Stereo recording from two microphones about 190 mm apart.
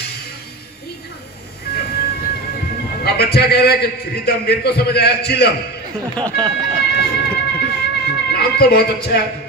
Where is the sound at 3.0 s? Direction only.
55° left (ahead or behind).